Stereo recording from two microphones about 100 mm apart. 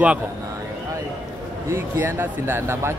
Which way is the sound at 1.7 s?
25° right (ahead or behind).